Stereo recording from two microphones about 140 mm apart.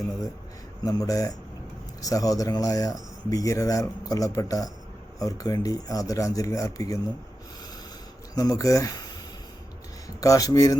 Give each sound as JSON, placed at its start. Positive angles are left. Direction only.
{"t": 0.9, "sound": "speech", "side_deg": 25}
{"t": 8.4, "sound": "speech", "side_deg": 25}
{"t": 10.2, "sound": "speech", "side_deg": 25}